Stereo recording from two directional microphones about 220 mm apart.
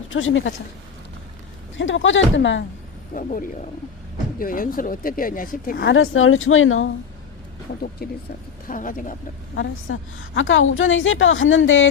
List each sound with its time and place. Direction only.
0.1 s a woman's voice: 60° left (ahead or behind)
1.7 s a woman's voice: 60° left (ahead or behind)
3.2 s speech: 35° left (ahead or behind)
5.8 s a woman's voice: 65° left (ahead or behind)
8.0 s speech: 45° left (ahead or behind)
9.6 s a woman's voice: 60° left (ahead or behind)